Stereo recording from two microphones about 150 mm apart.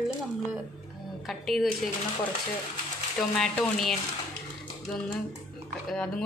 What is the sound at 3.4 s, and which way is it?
Speech, 5° left (ahead or behind).